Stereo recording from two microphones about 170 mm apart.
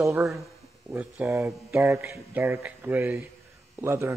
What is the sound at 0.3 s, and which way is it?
Speech, 5° right (ahead or behind).